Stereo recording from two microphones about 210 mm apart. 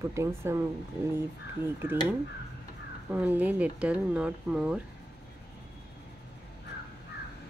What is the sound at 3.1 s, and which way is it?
Speech, 5° right (ahead or behind).